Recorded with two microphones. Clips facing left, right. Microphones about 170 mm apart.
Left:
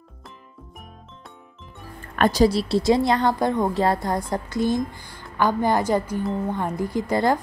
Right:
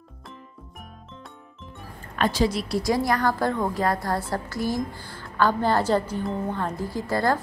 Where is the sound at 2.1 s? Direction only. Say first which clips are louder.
Left 5 dB; 45° left (ahead or behind).